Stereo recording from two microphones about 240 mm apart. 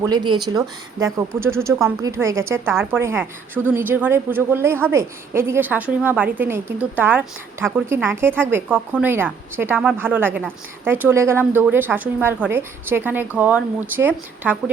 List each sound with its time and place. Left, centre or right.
0.0 s speech: centre